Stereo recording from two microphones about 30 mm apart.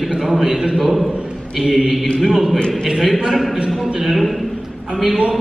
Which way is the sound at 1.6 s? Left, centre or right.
Centre.